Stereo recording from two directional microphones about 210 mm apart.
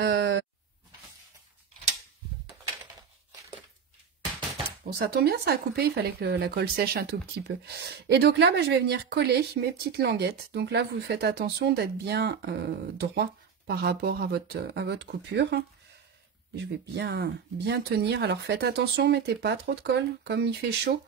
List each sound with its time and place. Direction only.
0.0 s sheep: 55° right (ahead or behind)
4.9 s speech: 50° right (ahead or behind)